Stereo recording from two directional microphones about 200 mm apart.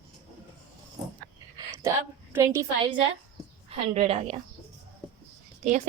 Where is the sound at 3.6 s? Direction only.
30° right (ahead or behind).